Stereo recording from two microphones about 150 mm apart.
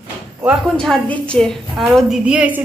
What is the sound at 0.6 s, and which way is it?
A woman's voice, centre (ahead or behind).